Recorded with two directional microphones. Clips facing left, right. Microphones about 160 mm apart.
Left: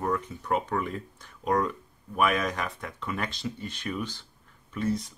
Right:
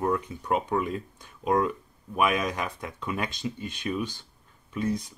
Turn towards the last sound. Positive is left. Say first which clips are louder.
# even
turn(degrees=-15)  # may be behind; listen again after turning